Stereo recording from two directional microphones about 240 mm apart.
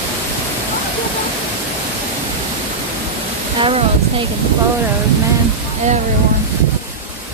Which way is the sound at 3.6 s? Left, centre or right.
Right.